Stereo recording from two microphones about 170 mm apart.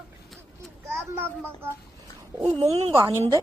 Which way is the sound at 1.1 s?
10° right (ahead or behind).